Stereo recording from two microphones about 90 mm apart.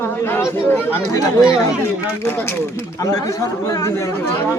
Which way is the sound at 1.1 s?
40° left (ahead or behind).